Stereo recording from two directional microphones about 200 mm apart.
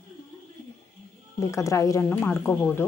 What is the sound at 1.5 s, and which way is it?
Speech, 15° left (ahead or behind).